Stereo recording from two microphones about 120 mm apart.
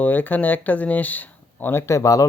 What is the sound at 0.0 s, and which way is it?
Speech, 15° left (ahead or behind).